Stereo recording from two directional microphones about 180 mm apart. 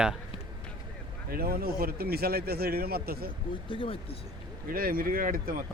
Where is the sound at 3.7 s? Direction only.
30° left (ahead or behind).